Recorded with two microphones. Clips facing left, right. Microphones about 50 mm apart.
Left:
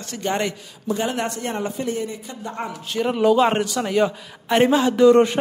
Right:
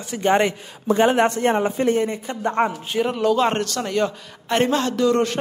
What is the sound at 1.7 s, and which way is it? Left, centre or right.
Speech, right.